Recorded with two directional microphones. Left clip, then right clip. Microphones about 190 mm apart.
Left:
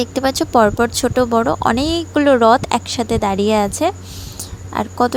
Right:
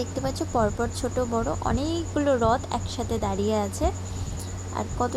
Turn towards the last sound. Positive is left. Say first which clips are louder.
# left 11 dB
turn(degrees=40)  # may be behind; listen again after turning